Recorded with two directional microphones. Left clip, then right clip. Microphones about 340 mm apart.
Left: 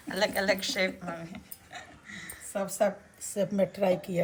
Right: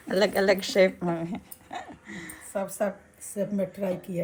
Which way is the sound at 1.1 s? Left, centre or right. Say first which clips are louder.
Right 8 dB; centre.